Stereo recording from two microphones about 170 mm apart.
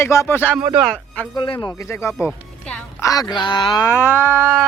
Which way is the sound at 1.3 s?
25° left (ahead or behind).